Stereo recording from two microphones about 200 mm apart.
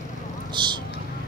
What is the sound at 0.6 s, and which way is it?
Vehicle, 25° right (ahead or behind).